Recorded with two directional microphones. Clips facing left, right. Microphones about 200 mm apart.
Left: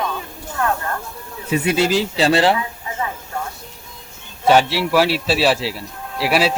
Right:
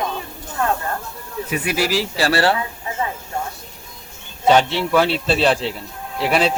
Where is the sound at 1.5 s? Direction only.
25° left (ahead or behind).